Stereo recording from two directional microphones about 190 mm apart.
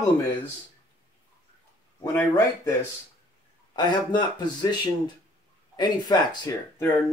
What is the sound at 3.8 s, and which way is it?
Speech, 25° left (ahead or behind).